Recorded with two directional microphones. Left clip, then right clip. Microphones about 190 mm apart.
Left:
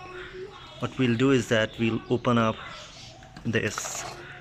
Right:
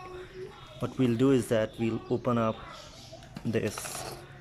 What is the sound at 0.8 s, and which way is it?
Speech, 10° right (ahead or behind).